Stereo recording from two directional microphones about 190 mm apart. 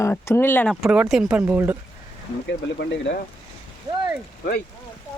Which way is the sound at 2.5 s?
65° left (ahead or behind).